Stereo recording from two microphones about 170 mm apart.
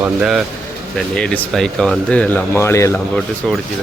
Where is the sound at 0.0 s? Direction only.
5° right (ahead or behind); by 3.0 s 15° left (ahead or behind).